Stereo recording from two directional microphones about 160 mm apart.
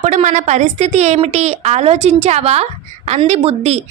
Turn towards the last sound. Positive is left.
turn(degrees=-40)  # may be behind; listen again after turning